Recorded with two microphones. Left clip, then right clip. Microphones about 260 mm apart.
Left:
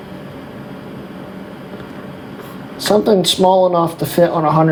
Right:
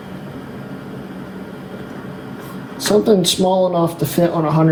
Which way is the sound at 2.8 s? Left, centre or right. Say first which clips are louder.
Left 1 dB; left.